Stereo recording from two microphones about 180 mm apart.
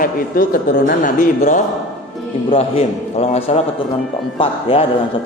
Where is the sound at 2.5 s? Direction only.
35° left (ahead or behind).